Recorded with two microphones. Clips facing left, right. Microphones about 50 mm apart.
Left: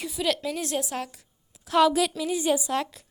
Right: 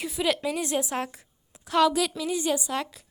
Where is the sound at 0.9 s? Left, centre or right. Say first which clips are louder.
Right 2 dB; right.